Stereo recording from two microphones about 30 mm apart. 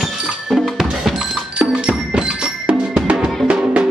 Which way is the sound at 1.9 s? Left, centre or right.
Right.